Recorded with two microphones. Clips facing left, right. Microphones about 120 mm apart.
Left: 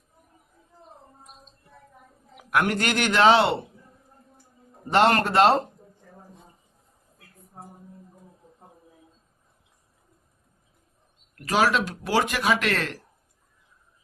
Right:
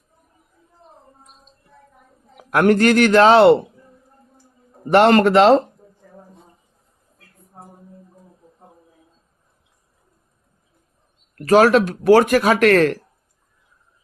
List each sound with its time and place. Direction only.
2.4 s a man's voice: 35° right (ahead or behind); by 3.6 s 50° right (ahead or behind)
4.9 s a man's voice: 70° right (ahead or behind); by 5.5 s 90° right
11.3 s speech: 45° right (ahead or behind)